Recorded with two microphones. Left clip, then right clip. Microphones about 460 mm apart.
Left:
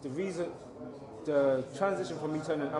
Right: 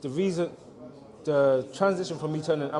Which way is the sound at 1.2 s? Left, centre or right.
Right.